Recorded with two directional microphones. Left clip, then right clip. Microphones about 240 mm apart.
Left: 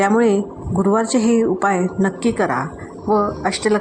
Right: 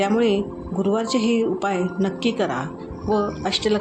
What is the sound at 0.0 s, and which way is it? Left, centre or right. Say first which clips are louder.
A woman's voice: left 4 dB; left.